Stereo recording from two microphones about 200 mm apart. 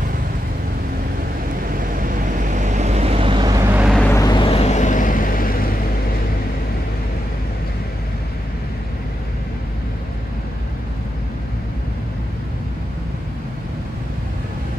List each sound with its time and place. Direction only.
2.0 s vehicle: 45° right (ahead or behind); by 3.9 s 10° right (ahead or behind)
4.1 s vehicle: 20° left (ahead or behind); by 5.5 s 45° left (ahead or behind)